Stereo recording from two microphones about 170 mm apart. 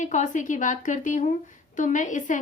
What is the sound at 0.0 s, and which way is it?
Speech, 45° left (ahead or behind).